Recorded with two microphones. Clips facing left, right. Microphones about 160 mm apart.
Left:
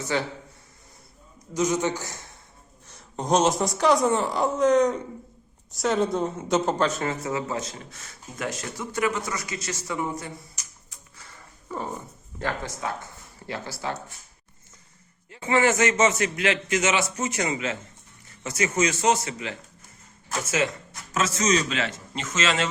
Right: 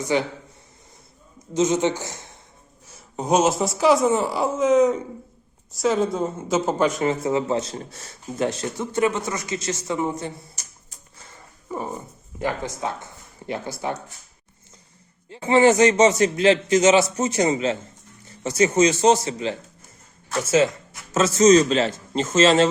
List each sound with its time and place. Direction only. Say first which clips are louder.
0.0 s speech: right 5 dB; 15° right (ahead or behind)
1.5 s speech: right 4 dB; 25° right (ahead or behind)
2.8 s a woman's voice: right 3 dB; 5° right (ahead or behind); by 10.7 s 30° right (ahead or behind)
11.2 s dog: right 2 dB; 20° right (ahead or behind)
12.4 s speech: right 4 dB; 15° right (ahead or behind)
15.3 s a man's voice: right 6 dB; 30° right (ahead or behind)
21.1 s a man's voice: right 9 dB; 30° right (ahead or behind)